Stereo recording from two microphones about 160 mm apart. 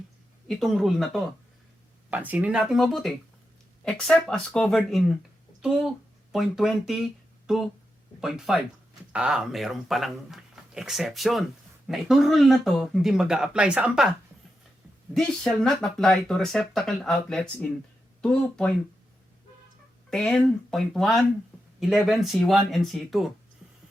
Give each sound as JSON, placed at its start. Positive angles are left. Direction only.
{"t": 0.4, "sound": "speech", "side_deg": 0}
{"t": 15.1, "sound": "speech", "side_deg": 5}
{"t": 20.1, "sound": "speech", "side_deg": 5}